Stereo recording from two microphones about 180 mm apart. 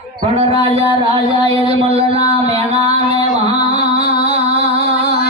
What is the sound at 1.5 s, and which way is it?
Music, 35° right (ahead or behind).